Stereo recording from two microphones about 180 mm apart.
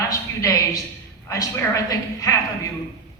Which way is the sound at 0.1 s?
20° left (ahead or behind).